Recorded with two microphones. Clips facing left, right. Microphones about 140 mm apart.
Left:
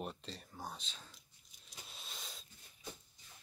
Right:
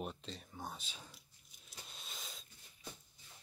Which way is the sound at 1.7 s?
Centre (ahead or behind).